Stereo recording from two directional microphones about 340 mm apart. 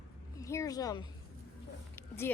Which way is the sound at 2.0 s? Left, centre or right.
Centre.